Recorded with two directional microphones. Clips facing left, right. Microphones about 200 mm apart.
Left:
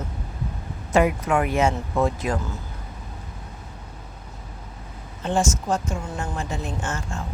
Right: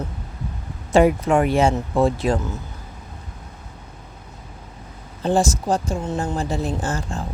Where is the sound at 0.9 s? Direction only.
30° right (ahead or behind).